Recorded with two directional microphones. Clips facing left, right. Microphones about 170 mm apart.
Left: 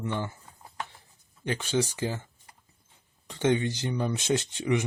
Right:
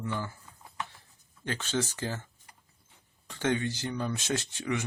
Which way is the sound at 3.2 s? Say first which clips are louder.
Left 4 dB; 20° left (ahead or behind).